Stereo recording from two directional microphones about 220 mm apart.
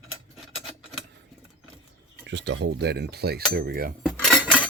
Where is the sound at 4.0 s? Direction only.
Centre (ahead or behind).